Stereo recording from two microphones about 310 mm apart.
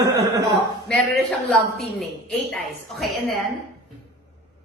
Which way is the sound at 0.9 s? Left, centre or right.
Centre.